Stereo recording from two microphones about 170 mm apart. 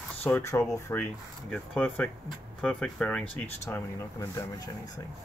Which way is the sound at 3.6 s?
15° left (ahead or behind).